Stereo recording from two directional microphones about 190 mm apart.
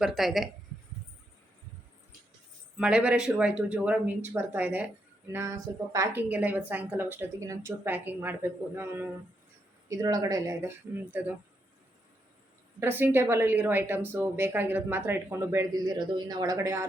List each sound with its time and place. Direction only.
0.0 s speech: centre (ahead or behind)
2.7 s a woman's voice: 5° right (ahead or behind)
12.8 s a woman's voice: 10° right (ahead or behind)